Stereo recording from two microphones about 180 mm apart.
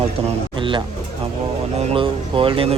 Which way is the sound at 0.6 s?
25° right (ahead or behind).